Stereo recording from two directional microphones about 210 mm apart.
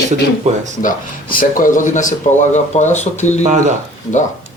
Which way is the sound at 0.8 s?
40° left (ahead or behind).